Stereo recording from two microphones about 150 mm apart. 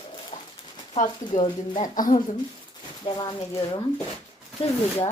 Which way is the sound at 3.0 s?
30° left (ahead or behind).